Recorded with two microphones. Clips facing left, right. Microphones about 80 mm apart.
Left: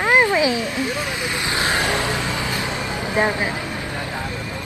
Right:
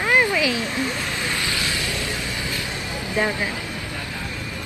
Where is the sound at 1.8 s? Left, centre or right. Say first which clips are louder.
Left 6 dB; left.